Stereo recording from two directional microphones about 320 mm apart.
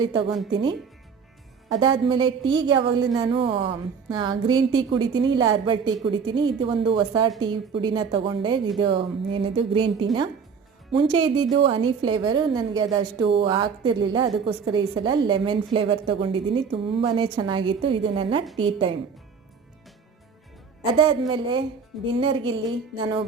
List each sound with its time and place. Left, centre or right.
0.0 s a woman's voice: centre
20.9 s a woman's voice: centre